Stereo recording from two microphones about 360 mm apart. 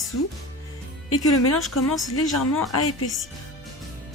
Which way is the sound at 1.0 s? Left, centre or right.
Left.